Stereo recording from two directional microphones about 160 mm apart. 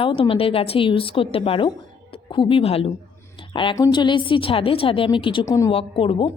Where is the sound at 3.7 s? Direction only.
25° left (ahead or behind).